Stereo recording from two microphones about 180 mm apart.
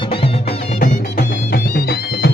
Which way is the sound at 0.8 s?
55° left (ahead or behind).